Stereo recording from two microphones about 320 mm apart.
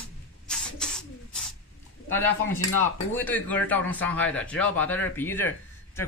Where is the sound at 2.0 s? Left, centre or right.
Centre.